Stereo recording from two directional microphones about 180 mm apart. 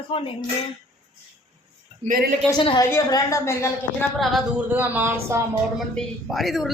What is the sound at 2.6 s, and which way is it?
Speech, 30° left (ahead or behind).